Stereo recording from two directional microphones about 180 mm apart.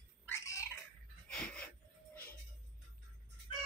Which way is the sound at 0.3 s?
15° left (ahead or behind).